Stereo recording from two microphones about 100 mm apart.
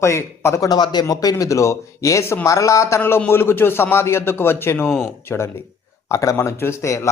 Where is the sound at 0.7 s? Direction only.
45° left (ahead or behind).